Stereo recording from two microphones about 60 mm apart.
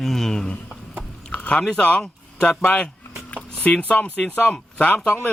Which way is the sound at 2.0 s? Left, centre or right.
Centre.